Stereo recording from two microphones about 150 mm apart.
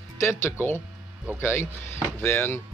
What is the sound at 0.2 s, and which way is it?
Speech, 15° left (ahead or behind).